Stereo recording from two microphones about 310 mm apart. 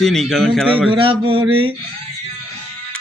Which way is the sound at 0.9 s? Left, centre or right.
Centre.